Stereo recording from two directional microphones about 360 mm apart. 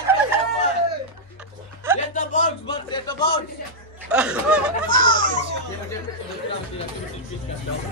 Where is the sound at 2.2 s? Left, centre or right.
Centre.